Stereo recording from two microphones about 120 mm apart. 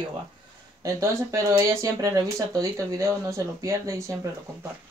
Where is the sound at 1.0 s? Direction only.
25° right (ahead or behind).